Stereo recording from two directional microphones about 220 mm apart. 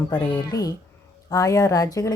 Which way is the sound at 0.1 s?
15° left (ahead or behind).